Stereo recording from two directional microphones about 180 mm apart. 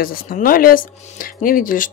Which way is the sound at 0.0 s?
55° left (ahead or behind).